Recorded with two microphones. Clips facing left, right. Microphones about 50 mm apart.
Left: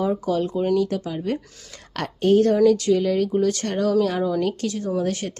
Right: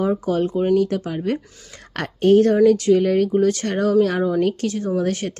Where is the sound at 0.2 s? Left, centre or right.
Right.